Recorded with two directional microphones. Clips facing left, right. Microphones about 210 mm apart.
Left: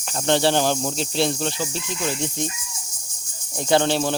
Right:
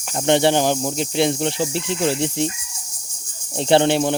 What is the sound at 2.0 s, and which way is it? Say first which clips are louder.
Cricket: right 6 dB; 30° right (ahead or behind).